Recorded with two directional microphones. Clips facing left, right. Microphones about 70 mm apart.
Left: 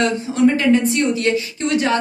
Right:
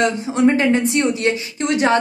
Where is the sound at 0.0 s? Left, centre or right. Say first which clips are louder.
Even; right.